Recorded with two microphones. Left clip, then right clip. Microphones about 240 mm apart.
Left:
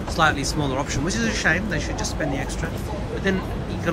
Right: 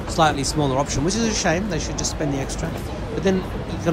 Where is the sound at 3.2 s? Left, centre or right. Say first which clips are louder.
Right 3 dB; centre.